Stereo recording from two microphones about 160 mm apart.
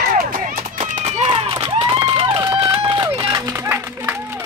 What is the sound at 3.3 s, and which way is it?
Music, 20° right (ahead or behind).